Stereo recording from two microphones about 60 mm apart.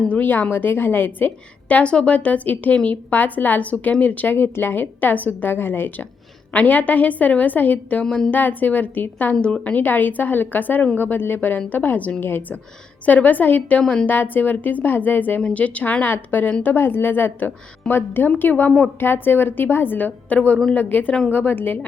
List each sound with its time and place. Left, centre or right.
0.1 s a woman's voice: left
8.0 s a woman's voice: centre
8.3 s a woman's voice: left
9.3 s a woman's voice: centre
9.7 s a woman's voice: left
14.1 s a woman's voice: left